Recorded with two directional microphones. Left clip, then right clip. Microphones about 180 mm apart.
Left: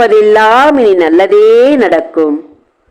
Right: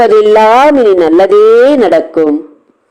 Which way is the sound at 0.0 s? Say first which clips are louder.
Right 1 dB; 20° right (ahead or behind).